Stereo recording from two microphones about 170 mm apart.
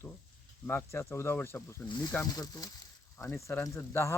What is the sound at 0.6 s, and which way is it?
Speech, 15° left (ahead or behind).